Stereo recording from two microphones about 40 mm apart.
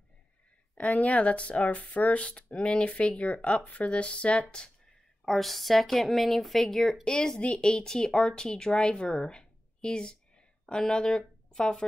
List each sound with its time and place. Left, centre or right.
0.7 s speech: left
5.2 s speech: centre
7.1 s speech: left